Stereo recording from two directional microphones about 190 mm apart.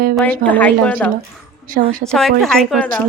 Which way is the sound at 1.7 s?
45° right (ahead or behind).